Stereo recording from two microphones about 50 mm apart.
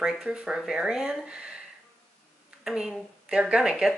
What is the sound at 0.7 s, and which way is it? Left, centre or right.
Speech, centre.